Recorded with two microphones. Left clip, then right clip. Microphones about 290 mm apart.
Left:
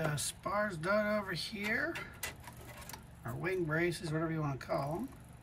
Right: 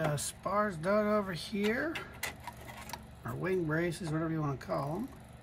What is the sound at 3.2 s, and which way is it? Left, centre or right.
Speech, centre.